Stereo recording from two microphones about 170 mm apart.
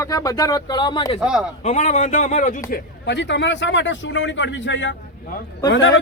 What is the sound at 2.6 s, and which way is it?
Speech, 75° left (ahead or behind).